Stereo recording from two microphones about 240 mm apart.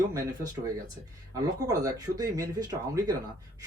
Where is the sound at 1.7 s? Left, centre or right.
Centre.